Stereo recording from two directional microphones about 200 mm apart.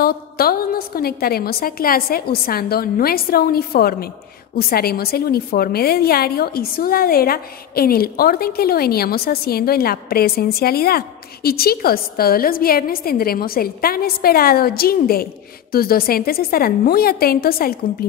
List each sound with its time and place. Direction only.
0.0 s a woman's voice: 50° left (ahead or behind)